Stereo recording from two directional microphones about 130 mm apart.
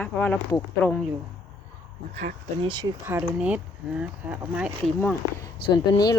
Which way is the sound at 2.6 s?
35° right (ahead or behind).